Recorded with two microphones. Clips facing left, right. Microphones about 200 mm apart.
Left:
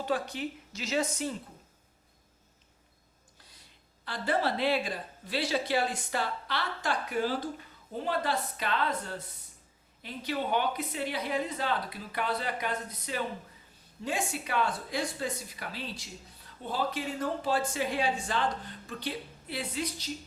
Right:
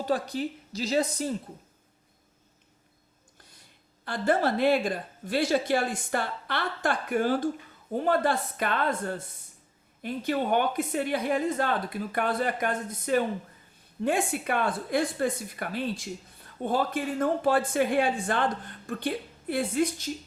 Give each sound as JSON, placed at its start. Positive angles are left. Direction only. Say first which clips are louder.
{"t": 0.0, "sound": "a woman's voice", "louder": "right 4 dB", "side_deg": -40}
{"t": 4.0, "sound": "a woman's voice", "louder": "right 5 dB", "side_deg": -50}